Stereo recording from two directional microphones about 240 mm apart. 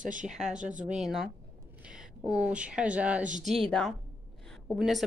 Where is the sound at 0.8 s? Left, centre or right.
Centre.